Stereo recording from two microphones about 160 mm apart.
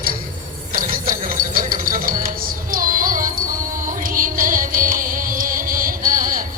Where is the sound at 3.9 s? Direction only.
60° right (ahead or behind).